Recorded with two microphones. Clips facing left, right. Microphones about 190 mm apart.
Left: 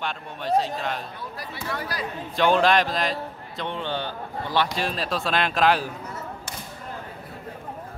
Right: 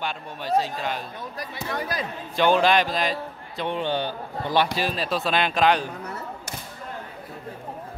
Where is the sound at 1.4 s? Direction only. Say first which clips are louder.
Right 2 dB; 20° right (ahead or behind).